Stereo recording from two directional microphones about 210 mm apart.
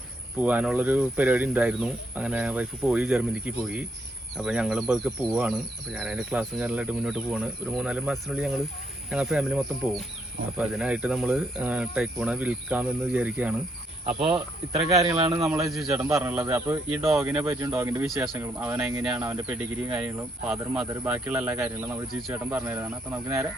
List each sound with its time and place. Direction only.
0.3 s speech: 5° right (ahead or behind)
14.1 s speech: 30° right (ahead or behind)
14.8 s speech: 15° right (ahead or behind)
15.4 s speech: 5° right (ahead or behind)